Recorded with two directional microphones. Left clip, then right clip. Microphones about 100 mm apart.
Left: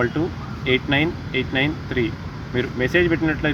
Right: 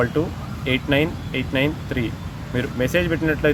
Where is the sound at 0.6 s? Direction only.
40° right (ahead or behind).